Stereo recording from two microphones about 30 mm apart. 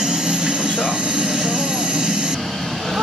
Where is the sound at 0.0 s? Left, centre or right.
Right.